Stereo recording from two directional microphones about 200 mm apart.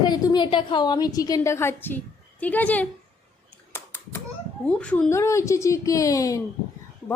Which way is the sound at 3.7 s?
10° left (ahead or behind).